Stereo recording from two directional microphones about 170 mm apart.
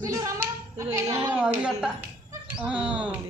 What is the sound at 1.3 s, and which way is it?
Speech, 5° right (ahead or behind).